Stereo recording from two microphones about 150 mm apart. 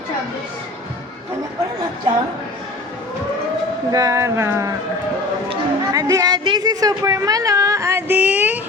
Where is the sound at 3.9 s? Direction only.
20° right (ahead or behind).